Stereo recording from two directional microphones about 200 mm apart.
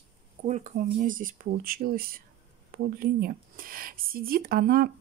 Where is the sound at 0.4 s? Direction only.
35° right (ahead or behind).